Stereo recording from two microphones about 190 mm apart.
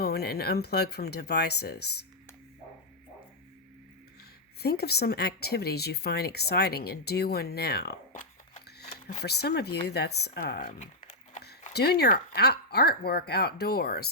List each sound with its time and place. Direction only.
0.0 s speech: 55° left (ahead or behind)
4.6 s speech: 55° left (ahead or behind)
9.2 s speech: 60° left (ahead or behind); by 11.4 s 40° left (ahead or behind)
11.4 s speech: 55° left (ahead or behind)